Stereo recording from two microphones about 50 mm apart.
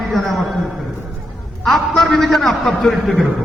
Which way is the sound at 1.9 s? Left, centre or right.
Centre.